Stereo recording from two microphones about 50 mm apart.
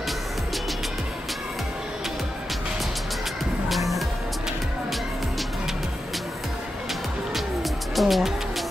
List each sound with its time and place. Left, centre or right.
7.9 s music: centre